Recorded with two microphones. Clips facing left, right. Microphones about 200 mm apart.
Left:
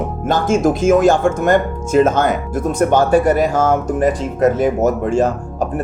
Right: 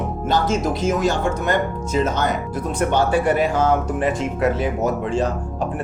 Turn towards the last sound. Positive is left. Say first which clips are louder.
# left 5 dB
turn(degrees=45)  # may be behind; listen again after turning